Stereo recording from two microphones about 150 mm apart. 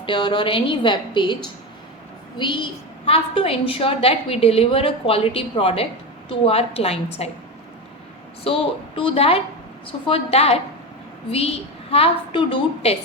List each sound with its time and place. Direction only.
0.0 s a woman's voice: 35° left (ahead or behind)
2.4 s a woman's voice: 30° left (ahead or behind)
8.5 s a woman's voice: 40° left (ahead or behind)